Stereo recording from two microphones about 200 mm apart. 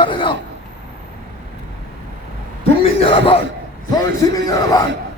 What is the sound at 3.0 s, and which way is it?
A man's voice, 25° left (ahead or behind).